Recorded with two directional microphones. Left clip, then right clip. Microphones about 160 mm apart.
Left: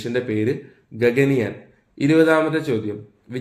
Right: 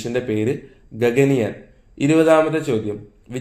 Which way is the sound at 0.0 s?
15° right (ahead or behind).